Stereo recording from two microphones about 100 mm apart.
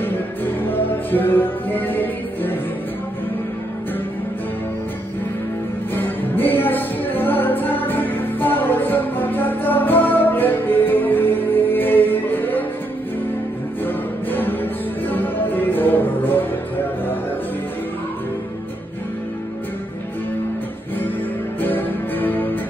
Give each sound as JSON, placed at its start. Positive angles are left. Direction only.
{"t": 0.0, "sound": "music", "side_deg": 20}
{"t": 5.9, "sound": "music", "side_deg": 20}
{"t": 13.8, "sound": "music", "side_deg": 20}
{"t": 21.5, "sound": "music", "side_deg": 20}